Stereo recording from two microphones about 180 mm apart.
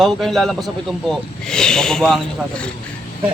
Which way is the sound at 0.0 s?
Centre (ahead or behind).